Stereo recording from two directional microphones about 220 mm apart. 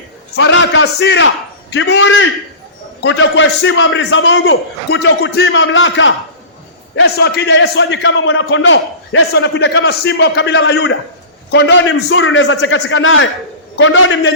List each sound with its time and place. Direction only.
0.3 s a man's voice: 55° left (ahead or behind)